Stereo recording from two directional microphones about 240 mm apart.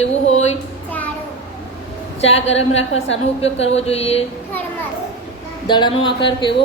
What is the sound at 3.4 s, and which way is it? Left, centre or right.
Speech, left.